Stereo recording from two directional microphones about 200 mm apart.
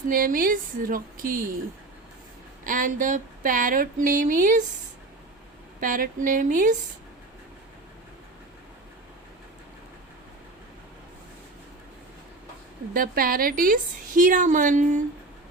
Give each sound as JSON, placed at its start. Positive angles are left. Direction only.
{"t": 0.1, "sound": "speech", "side_deg": -45}
{"t": 2.6, "sound": "a woman's voice", "side_deg": -40}
{"t": 5.8, "sound": "a woman's voice", "side_deg": -40}
{"t": 12.9, "sound": "a woman's voice", "side_deg": -45}